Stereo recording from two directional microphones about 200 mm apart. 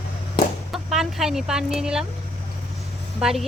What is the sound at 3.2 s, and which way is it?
Speech, centre (ahead or behind).